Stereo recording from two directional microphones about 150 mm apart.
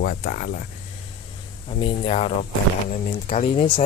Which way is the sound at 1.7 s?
40° left (ahead or behind).